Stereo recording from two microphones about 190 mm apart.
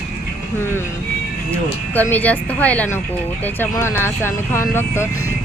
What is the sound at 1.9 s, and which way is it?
Speech, 10° left (ahead or behind).